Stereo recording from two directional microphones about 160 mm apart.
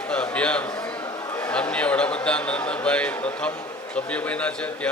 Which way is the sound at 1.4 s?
5° left (ahead or behind).